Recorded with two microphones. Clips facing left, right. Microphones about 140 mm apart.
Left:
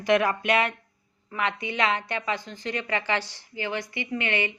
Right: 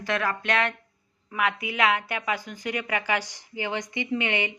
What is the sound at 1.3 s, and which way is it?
A woman's voice, 5° right (ahead or behind).